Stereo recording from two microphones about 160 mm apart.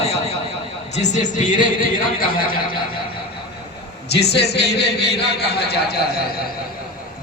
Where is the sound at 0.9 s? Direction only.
50° left (ahead or behind).